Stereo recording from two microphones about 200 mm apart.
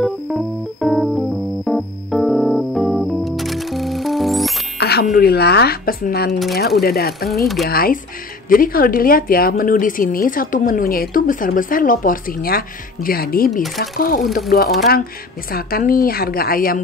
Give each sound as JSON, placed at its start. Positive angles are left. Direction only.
{"t": 0.0, "sound": "music", "side_deg": 0}
{"t": 4.7, "sound": "music", "side_deg": 55}
{"t": 5.0, "sound": "a woman's voice", "side_deg": 50}
{"t": 7.2, "sound": "speech", "side_deg": 0}
{"t": 7.6, "sound": "a woman's voice", "side_deg": 50}